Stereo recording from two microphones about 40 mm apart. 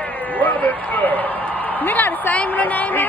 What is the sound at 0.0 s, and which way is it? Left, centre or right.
A man's voice, left.